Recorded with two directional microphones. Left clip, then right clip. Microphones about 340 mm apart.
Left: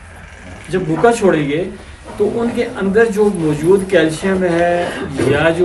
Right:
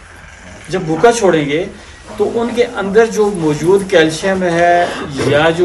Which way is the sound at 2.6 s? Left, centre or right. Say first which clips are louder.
Right 3 dB; centre.